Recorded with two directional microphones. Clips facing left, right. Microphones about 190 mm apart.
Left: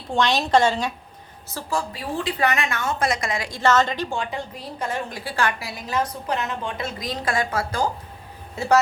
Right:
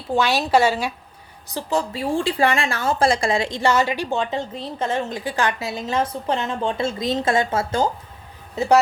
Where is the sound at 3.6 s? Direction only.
10° right (ahead or behind).